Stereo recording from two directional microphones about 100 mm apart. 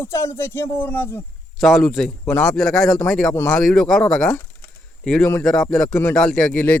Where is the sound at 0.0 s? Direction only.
30° left (ahead or behind).